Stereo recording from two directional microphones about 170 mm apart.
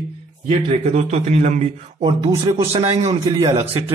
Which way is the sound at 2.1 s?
25° right (ahead or behind).